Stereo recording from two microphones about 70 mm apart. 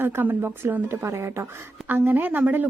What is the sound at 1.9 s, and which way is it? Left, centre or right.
Speech, right.